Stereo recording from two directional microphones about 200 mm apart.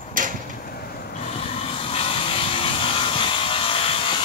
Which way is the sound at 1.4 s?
30° left (ahead or behind).